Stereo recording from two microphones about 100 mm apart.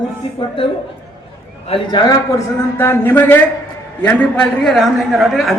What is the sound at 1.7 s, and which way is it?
Speech, 50° left (ahead or behind).